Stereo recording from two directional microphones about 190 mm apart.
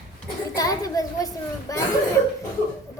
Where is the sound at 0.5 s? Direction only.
20° left (ahead or behind).